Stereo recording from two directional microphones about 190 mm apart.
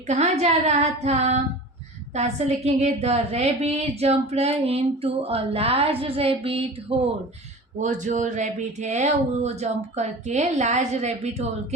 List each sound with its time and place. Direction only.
0.1 s a woman's voice: 35° right (ahead or behind)
7.8 s a woman's voice: 40° right (ahead or behind)